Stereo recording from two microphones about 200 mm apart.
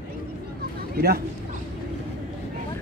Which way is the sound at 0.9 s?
50° right (ahead or behind).